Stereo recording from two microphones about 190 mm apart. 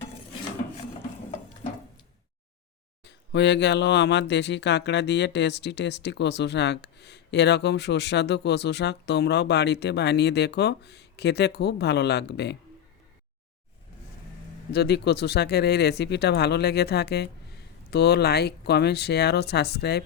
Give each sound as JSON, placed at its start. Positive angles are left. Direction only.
{"t": 3.0, "sound": "speech", "side_deg": 65}
{"t": 14.7, "sound": "speech", "side_deg": 60}